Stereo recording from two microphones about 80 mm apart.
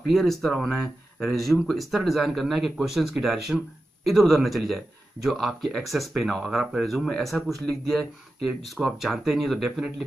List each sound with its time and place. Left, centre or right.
0.0 s speech: centre